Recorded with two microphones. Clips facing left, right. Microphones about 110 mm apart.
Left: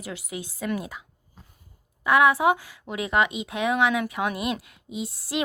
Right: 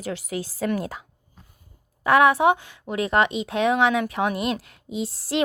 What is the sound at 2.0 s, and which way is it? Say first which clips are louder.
A woman's voice: right 2 dB; 30° right (ahead or behind).